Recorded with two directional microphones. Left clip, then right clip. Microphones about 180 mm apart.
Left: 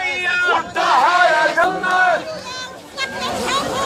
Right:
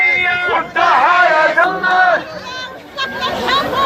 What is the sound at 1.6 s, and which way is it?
Crowd, 30° right (ahead or behind).